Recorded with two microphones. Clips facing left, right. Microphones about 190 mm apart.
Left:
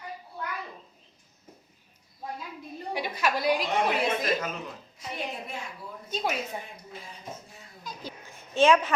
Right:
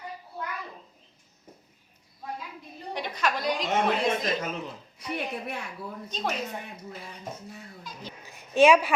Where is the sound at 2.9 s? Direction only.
5° left (ahead or behind).